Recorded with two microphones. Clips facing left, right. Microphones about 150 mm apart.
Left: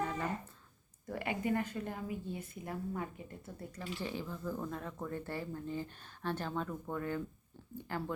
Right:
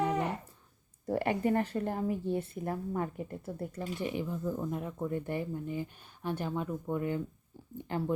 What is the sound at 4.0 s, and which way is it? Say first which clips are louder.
Speech: right 6 dB; 20° right (ahead or behind).